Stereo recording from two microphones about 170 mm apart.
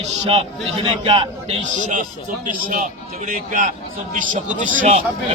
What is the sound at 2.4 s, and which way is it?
A man's voice, 50° right (ahead or behind).